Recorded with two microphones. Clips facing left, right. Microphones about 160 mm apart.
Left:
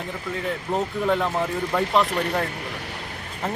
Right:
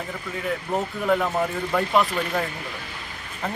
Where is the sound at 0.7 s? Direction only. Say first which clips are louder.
Left 1 dB; 20° left (ahead or behind).